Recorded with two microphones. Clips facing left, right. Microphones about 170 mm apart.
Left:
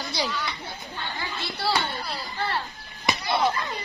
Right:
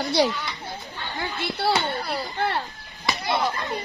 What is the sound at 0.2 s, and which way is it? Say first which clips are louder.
Speech: right 8 dB; 60° right (ahead or behind).